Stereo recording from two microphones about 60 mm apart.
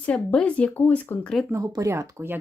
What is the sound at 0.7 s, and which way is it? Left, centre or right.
Speech, left.